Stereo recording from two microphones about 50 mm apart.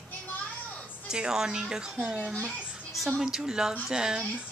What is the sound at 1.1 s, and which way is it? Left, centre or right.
Speech, centre.